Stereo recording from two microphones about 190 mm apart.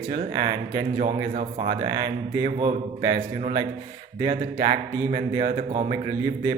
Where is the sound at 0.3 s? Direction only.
20° right (ahead or behind).